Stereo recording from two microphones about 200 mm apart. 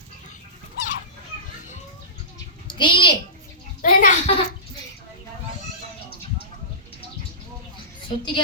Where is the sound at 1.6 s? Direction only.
40° left (ahead or behind).